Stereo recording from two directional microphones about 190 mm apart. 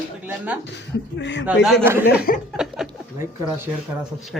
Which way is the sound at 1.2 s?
70° left (ahead or behind).